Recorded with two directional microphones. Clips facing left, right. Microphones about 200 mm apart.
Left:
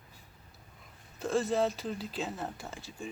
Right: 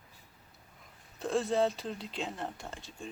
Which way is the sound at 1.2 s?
Centre (ahead or behind).